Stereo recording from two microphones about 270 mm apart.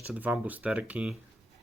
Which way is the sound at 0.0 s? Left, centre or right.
Centre.